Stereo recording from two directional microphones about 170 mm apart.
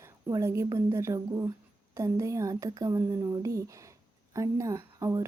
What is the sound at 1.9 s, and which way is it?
Speech, 20° right (ahead or behind).